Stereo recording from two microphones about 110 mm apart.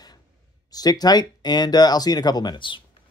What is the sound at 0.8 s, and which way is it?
Speech, 40° left (ahead or behind).